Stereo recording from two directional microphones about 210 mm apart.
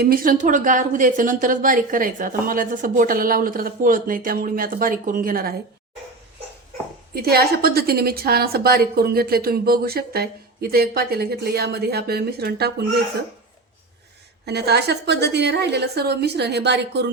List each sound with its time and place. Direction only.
0.0 s a woman's voice: 45° right (ahead or behind)
7.1 s a woman's voice: 45° right (ahead or behind)
14.4 s a woman's voice: 50° right (ahead or behind)